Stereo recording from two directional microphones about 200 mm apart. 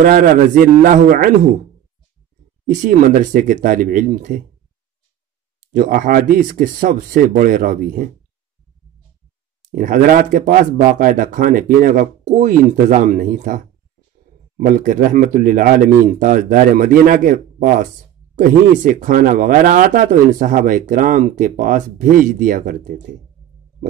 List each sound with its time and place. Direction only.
0.0 s a man's voice: 40° right (ahead or behind)
2.8 s a man's voice: 45° right (ahead or behind)
5.7 s speech: 40° right (ahead or behind)
9.7 s speech: 45° right (ahead or behind)
14.6 s speech: 40° right (ahead or behind)